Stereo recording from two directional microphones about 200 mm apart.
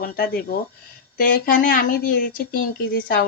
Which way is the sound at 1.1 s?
45° left (ahead or behind).